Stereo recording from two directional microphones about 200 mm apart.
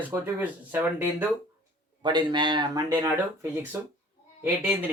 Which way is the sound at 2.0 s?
20° right (ahead or behind).